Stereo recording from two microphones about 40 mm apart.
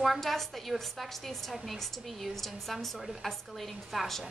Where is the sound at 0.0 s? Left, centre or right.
Centre.